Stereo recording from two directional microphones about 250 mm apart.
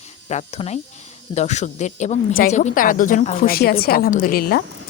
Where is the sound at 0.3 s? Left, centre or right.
Left.